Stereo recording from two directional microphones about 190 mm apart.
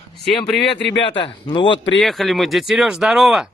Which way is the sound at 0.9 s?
25° left (ahead or behind).